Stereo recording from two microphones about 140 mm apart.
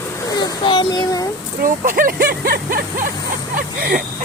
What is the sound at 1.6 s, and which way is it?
Speech, 80° right.